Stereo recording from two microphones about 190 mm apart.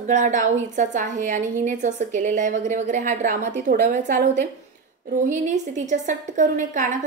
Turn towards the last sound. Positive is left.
turn(degrees=-40)  # may be behind; listen again after turning